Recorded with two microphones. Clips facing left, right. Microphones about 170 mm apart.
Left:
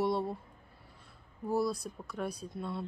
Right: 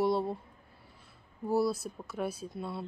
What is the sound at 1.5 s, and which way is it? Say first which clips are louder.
Speech: right 3 dB; 5° right (ahead or behind).